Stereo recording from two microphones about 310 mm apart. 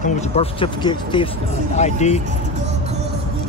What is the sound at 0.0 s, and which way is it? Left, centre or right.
Speech, left.